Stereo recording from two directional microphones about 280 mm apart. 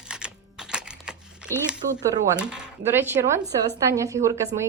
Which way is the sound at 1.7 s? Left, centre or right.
Centre.